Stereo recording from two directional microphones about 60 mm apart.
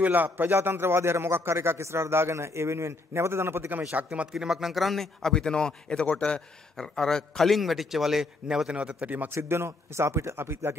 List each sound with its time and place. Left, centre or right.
0.0 s a man's voice: right
3.9 s a man's voice: right
4.3 s a man's voice: centre; by 9.3 s right
9.3 s a man's voice: right